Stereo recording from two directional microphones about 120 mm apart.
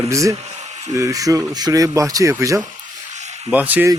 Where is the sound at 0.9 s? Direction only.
25° right (ahead or behind).